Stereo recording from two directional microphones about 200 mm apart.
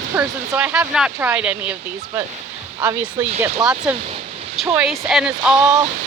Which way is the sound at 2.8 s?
10° right (ahead or behind).